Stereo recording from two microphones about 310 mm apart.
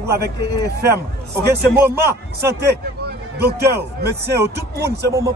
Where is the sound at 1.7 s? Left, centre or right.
Centre.